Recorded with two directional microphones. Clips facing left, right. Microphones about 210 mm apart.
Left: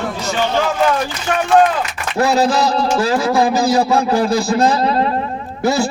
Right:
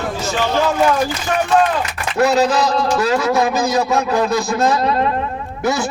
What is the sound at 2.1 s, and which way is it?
A man's voice, 30° left (ahead or behind).